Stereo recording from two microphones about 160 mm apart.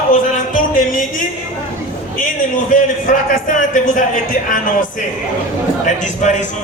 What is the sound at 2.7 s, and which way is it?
A man's voice, 55° left (ahead or behind).